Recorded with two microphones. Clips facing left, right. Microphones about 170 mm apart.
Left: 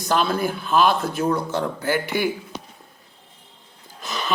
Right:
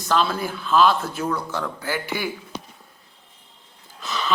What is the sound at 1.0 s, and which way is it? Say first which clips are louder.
Speech: left 4 dB; 40° left (ahead or behind).